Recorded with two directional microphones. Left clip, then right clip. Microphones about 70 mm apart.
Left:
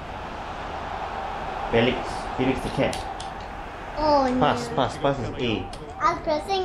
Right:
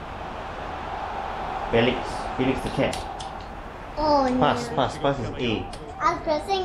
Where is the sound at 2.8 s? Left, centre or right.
Left.